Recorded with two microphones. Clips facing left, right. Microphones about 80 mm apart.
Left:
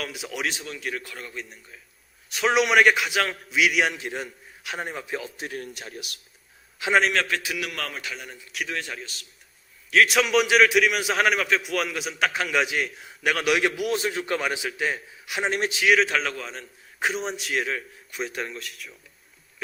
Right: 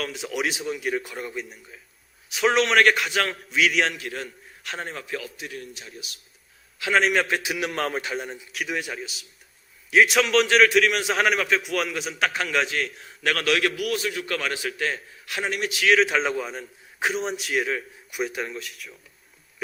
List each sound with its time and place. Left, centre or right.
0.0 s a man's voice: centre
3.9 s a man's voice: left
4.6 s a man's voice: centre
5.4 s speech: left
6.8 s a man's voice: left
7.3 s a man's voice: right
8.6 s a man's voice: centre
10.1 s a man's voice: centre
15.4 s a man's voice: left
15.9 s a man's voice: centre
16.2 s a man's voice: centre